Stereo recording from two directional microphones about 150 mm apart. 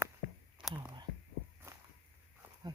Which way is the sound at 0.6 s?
30° right (ahead or behind).